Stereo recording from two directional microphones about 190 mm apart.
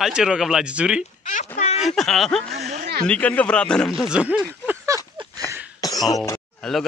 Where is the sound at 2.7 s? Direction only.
55° right (ahead or behind).